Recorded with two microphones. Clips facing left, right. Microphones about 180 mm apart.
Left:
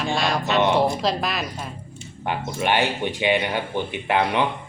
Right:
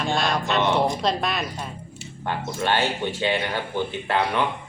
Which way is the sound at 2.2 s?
15° left (ahead or behind).